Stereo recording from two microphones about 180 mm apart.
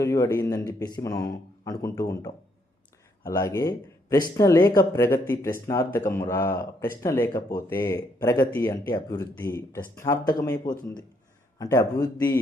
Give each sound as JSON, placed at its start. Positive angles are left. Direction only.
{"t": 0.0, "sound": "speech", "side_deg": 20}